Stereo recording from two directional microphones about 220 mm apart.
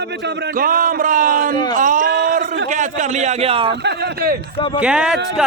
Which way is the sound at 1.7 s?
35° right (ahead or behind).